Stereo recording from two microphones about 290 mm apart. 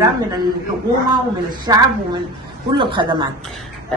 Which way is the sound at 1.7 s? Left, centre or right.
Centre.